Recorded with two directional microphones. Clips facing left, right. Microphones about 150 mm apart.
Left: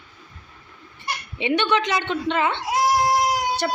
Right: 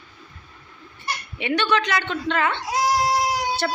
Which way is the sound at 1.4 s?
20° left (ahead or behind).